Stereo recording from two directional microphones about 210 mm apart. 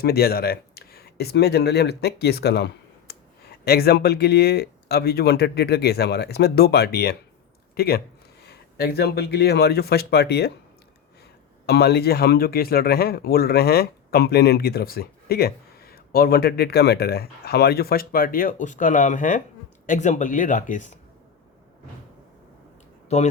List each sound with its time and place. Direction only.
0.0 s speech: 50° left (ahead or behind)
11.6 s speech: 50° left (ahead or behind)
23.0 s speech: 30° left (ahead or behind)